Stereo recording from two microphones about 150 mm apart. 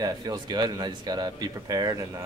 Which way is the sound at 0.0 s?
25° right (ahead or behind).